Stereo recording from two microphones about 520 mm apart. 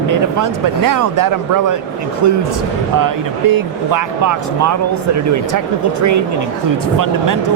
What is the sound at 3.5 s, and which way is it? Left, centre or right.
Speech, right.